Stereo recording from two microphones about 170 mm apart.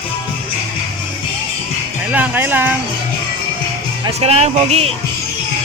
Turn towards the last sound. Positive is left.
turn(degrees=-40)  # may be behind; listen again after turning